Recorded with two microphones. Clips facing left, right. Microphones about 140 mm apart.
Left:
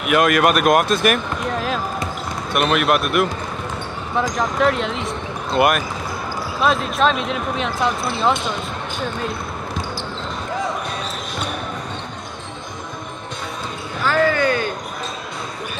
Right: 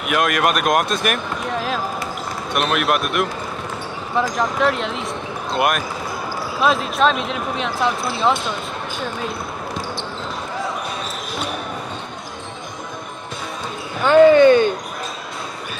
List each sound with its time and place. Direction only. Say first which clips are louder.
0.0 s speech: left 3 dB; centre (ahead or behind)
14.0 s speech: right 8 dB; 25° right (ahead or behind)